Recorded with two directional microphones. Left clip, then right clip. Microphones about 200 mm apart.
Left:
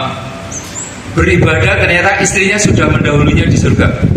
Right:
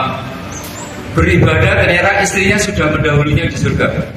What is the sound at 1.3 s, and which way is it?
A man's voice, 25° left (ahead or behind).